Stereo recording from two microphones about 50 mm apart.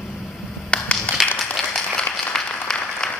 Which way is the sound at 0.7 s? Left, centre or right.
Left.